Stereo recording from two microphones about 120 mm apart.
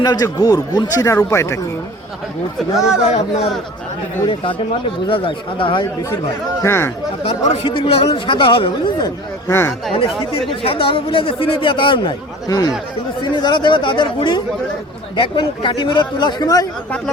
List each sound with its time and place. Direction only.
0.0 s speech: 35° left (ahead or behind)
2.6 s speech: 5° right (ahead or behind)
4.3 s speech: 45° left (ahead or behind)
5.8 s speech: 30° left (ahead or behind)
7.3 s speech: 60° left (ahead or behind)
9.0 s speech: 20° left (ahead or behind)
10.5 s speech: 45° left (ahead or behind)